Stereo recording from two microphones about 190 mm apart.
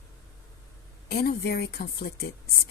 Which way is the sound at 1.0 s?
55° left (ahead or behind).